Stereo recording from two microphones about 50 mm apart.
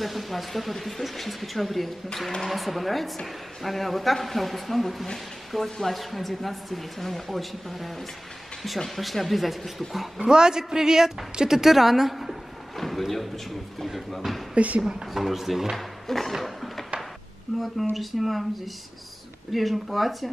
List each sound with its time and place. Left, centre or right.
0.0 s a woman's voice: centre
10.2 s a man's voice: centre
14.5 s a woman's voice: right
14.8 s a woman's voice: centre
15.7 s music: centre
17.5 s a woman's voice: centre
19.5 s a woman's voice: centre